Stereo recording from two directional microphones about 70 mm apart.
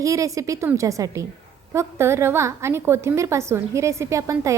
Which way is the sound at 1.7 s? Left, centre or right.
Right.